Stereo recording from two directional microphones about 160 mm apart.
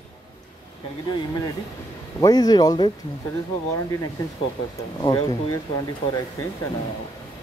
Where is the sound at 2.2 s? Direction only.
25° left (ahead or behind).